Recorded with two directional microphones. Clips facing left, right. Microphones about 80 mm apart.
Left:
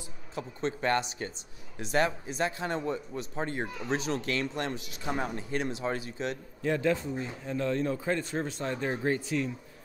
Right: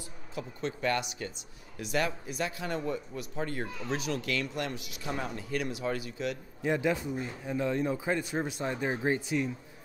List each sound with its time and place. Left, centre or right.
0.3 s speech: left
6.6 s speech: centre